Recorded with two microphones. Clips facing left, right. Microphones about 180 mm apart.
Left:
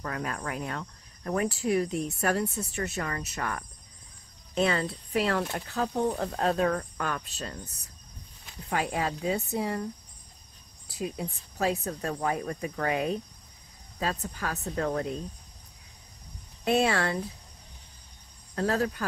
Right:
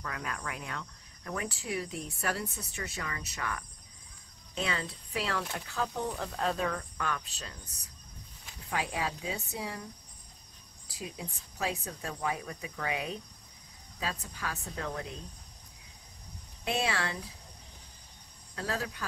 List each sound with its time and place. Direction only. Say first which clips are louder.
0.0 s cricket: left 5 dB; 40° left (ahead or behind)
2.1 s speech: left 6 dB; 45° left (ahead or behind)
4.6 s speech: left 8 dB; 60° left (ahead or behind)
8.6 s speech: left 5 dB; 50° left (ahead or behind)
11.0 s speech: left 8 dB; 45° left (ahead or behind)
16.6 s speech: left 7 dB; 45° left (ahead or behind)
18.5 s speech: left 8 dB; 50° left (ahead or behind)